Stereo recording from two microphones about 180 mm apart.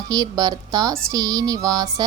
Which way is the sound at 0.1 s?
20° right (ahead or behind).